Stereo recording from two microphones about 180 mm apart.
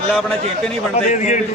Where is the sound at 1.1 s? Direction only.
40° left (ahead or behind).